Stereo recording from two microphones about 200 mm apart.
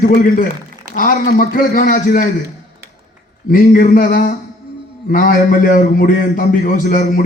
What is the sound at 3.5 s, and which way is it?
A man's voice, 45° left (ahead or behind).